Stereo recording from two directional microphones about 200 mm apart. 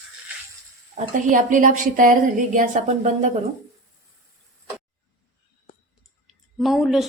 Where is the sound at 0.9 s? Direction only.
40° right (ahead or behind).